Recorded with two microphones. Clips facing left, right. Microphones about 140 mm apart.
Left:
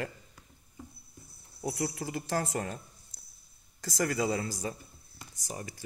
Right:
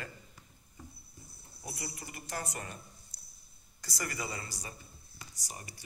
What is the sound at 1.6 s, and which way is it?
Speech, 90° left.